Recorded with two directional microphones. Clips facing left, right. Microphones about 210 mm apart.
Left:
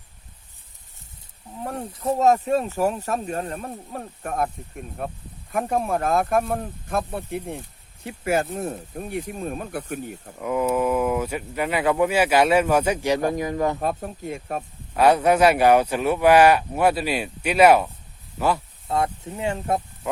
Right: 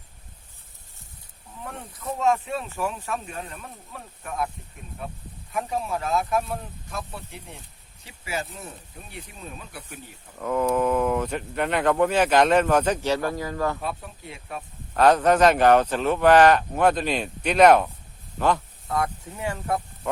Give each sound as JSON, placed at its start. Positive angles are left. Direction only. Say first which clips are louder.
{"t": 1.9, "sound": "speech", "louder": "left 5 dB", "side_deg": 30}
{"t": 10.4, "sound": "speech", "louder": "left 1 dB", "side_deg": 10}
{"t": 13.7, "sound": "speech", "louder": "left 6 dB", "side_deg": 45}
{"t": 14.9, "sound": "speech", "louder": "left 1 dB", "side_deg": 10}
{"t": 18.9, "sound": "speech", "louder": "left 3 dB", "side_deg": 25}